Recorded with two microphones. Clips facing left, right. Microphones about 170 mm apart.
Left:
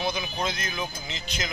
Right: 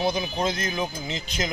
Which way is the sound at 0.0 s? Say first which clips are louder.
Right 4 dB; 35° right (ahead or behind).